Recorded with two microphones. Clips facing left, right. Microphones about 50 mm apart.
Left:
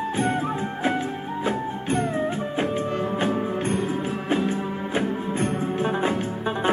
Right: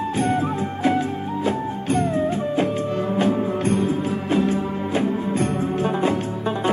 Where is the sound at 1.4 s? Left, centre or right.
Left.